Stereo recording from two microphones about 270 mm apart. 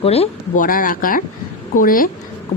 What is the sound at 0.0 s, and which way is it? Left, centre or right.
A woman's voice, left.